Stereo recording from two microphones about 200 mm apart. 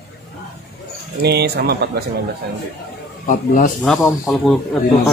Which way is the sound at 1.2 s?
55° right (ahead or behind).